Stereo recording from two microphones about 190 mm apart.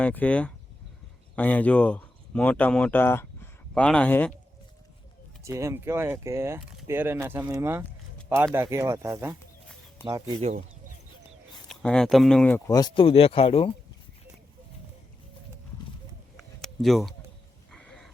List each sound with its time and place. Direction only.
0.0 s speech: 5° left (ahead or behind)
5.5 s speech: 15° right (ahead or behind)
11.7 s speech: 5° left (ahead or behind); by 13.7 s 30° left (ahead or behind)
16.4 s a sound: centre (ahead or behind)